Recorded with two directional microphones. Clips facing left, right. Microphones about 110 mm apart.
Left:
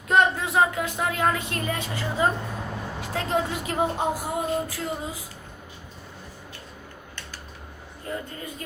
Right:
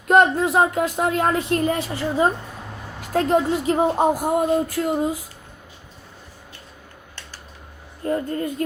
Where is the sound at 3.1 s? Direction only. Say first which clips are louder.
Right 8 dB; 45° right (ahead or behind).